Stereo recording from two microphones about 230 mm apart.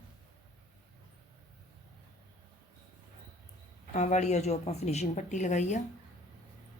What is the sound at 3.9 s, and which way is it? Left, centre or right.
Speech, left.